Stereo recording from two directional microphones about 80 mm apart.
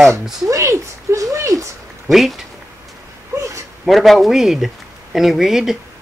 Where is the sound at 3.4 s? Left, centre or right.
Right.